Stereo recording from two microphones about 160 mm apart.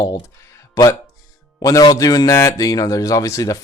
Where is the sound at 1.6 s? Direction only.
20° left (ahead or behind).